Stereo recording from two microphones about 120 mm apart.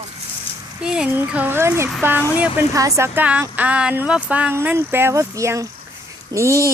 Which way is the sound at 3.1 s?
10° right (ahead or behind).